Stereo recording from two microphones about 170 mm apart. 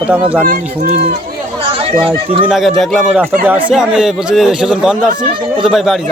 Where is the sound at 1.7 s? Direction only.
35° right (ahead or behind).